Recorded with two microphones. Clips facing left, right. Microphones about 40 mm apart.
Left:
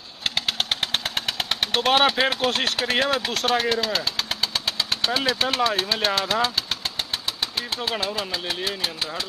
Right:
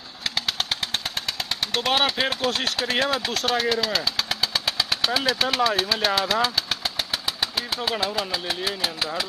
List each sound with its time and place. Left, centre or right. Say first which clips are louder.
0.2 s a sound: left 2 dB; left
0.7 s vehicle: left 2 dB; left
1.9 s speech: left 4 dB; centre
3.0 s vehicle: left 1 dB; centre
5.1 s speech: even; centre
6.3 s engine: even; centre
8.0 s speech: right 1 dB; centre